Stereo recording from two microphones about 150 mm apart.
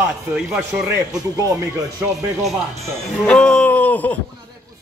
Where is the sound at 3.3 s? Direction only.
10° left (ahead or behind).